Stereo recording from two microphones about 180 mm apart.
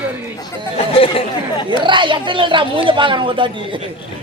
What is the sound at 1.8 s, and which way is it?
A man's voice, 25° right (ahead or behind).